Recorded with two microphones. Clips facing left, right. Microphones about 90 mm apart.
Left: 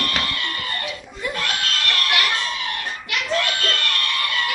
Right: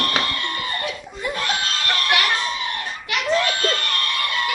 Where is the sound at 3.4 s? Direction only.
30° right (ahead or behind).